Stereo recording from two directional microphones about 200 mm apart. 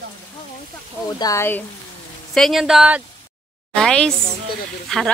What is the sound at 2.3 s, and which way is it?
Speech, centre (ahead or behind).